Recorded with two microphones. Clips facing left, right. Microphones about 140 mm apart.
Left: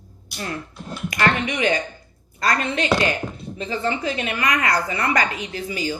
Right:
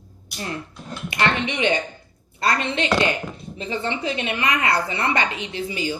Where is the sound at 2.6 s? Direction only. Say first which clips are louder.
Left 1 dB; 25° right (ahead or behind).